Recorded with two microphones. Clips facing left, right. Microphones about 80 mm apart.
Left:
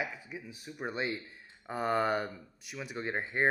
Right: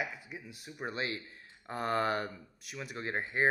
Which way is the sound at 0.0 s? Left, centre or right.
Centre.